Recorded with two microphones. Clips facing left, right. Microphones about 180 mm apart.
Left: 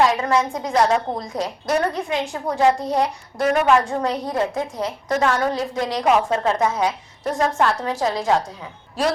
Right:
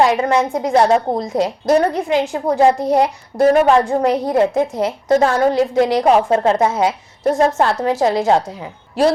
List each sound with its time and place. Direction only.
0.0 s a woman's voice: 30° right (ahead or behind)